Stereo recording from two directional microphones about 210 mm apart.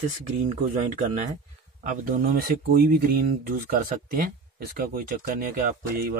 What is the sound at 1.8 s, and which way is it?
Speech, 40° right (ahead or behind).